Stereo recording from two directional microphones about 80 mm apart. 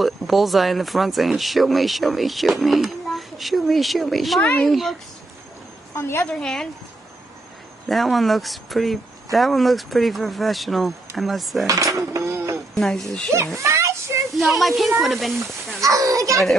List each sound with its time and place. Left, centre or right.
0.0 s speech: centre
4.4 s a child's voice: centre
4.6 s speech: centre
5.9 s a woman's voice: left
6.2 s speech: centre
7.9 s speech: centre
11.6 s cutlery: right
12.7 s speech: centre
13.6 s a sound: right
14.4 s speech: centre
15.8 s cutlery: right